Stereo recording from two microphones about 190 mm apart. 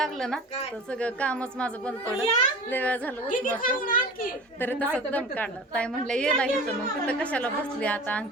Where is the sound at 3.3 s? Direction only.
45° left (ahead or behind).